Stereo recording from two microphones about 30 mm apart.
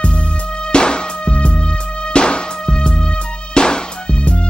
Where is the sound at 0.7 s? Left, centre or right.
Left.